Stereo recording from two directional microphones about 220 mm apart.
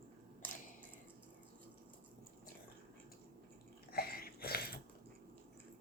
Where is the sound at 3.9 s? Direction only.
45° left (ahead or behind).